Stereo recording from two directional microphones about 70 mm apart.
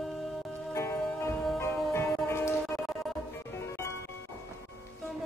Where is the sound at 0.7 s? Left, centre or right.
Left.